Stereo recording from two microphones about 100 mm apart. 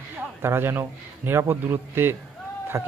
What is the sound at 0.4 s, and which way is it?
A man's voice, 25° right (ahead or behind).